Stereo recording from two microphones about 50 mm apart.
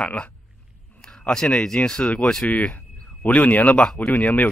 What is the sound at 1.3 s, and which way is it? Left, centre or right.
Speech, centre.